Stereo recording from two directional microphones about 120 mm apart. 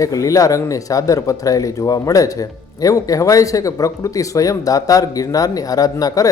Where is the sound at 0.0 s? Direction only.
30° left (ahead or behind).